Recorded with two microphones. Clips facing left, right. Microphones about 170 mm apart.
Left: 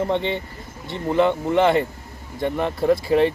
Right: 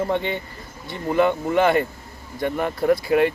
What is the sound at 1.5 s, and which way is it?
Speech, 25° left (ahead or behind).